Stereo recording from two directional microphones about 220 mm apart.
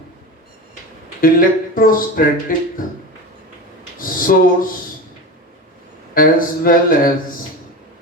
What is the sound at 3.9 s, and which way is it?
Speech, 40° left (ahead or behind).